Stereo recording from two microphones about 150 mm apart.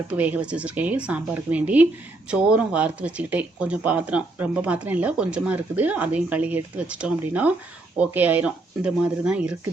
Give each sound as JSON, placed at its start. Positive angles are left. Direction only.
{"t": 0.1, "sound": "speech", "side_deg": -10}